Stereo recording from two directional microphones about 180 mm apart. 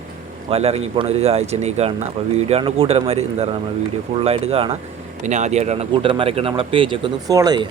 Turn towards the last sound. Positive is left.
turn(degrees=-20)  # may be behind; listen again after turning